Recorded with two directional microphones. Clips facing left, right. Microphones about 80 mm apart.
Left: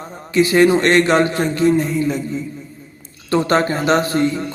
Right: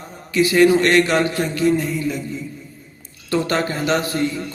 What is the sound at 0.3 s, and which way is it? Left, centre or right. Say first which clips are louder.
Speech: left 1 dB; left.